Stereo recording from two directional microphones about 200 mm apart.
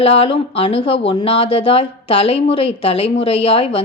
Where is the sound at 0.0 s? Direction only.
30° left (ahead or behind).